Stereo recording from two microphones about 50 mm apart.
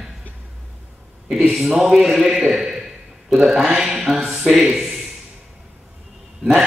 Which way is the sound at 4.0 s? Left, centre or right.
Centre.